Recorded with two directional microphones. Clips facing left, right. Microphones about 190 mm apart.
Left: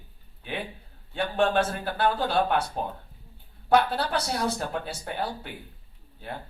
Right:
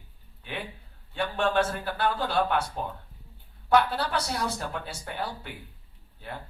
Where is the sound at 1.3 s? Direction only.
40° left (ahead or behind).